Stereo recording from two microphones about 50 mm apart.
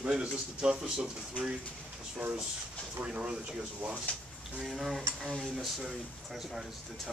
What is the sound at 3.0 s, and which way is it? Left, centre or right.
Speech, right.